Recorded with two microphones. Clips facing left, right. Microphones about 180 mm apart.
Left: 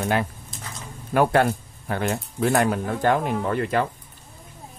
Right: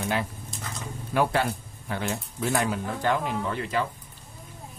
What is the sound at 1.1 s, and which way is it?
Speech, 55° left (ahead or behind).